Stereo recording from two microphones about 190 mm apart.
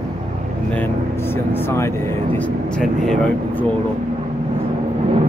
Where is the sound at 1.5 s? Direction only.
15° left (ahead or behind).